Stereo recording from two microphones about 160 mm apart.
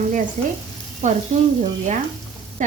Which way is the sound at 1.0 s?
50° right (ahead or behind).